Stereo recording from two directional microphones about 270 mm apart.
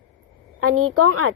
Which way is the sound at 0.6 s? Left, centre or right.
Right.